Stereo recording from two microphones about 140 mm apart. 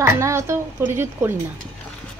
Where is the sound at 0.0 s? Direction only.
20° right (ahead or behind).